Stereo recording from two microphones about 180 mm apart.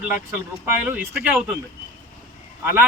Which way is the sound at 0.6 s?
10° right (ahead or behind).